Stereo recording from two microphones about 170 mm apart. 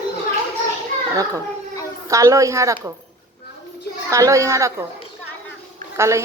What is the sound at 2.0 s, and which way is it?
Speech, 20° right (ahead or behind).